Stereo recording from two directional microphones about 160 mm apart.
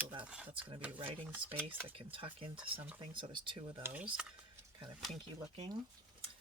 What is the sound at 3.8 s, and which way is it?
Speech, 10° right (ahead or behind).